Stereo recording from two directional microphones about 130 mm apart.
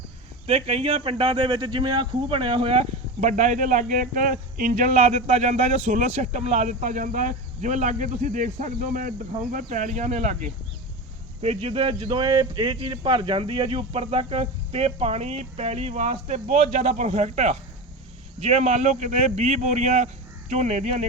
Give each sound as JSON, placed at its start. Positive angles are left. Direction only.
{"t": 0.4, "sound": "speech", "side_deg": -50}
{"t": 3.2, "sound": "speech", "side_deg": -70}
{"t": 11.4, "sound": "speech", "side_deg": -50}